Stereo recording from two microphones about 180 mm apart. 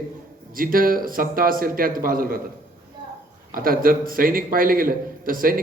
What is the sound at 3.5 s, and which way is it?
A man's voice, 50° right (ahead or behind).